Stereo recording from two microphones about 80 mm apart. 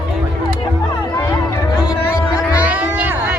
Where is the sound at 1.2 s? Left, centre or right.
Left.